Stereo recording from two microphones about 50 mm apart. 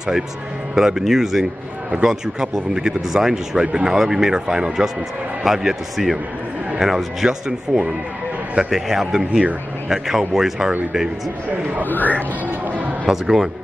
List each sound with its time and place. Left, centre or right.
0.7 s a man's voice: centre
7.2 s a man's voice: centre
11.8 s speech: left
13.0 s speech: centre